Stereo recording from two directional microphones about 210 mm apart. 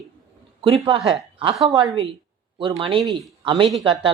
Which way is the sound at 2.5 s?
25° right (ahead or behind).